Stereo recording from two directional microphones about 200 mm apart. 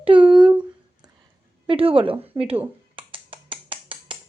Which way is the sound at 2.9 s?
25° right (ahead or behind).